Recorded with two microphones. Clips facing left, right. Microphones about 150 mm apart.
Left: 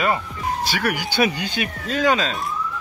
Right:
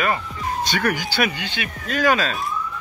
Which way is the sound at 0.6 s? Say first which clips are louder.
Right 3 dB; 10° left (ahead or behind).